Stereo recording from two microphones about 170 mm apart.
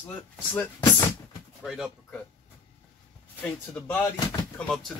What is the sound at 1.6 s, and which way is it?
Speech, centre (ahead or behind).